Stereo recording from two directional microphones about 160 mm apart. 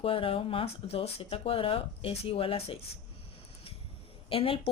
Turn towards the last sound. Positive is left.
turn(degrees=35)  # may be behind; listen again after turning